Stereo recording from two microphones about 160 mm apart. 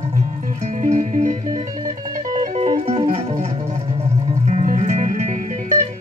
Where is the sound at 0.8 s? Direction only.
50° right (ahead or behind).